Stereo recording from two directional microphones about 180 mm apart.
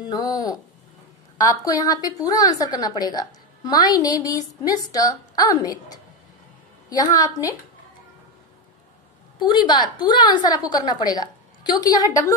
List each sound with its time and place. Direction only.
0.1 s a woman's voice: 20° left (ahead or behind)
9.4 s a woman's voice: 25° left (ahead or behind)